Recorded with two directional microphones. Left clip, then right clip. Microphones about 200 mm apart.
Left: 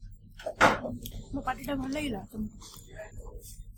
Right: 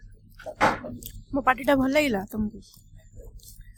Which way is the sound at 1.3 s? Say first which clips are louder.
Right 12 dB; 40° right (ahead or behind).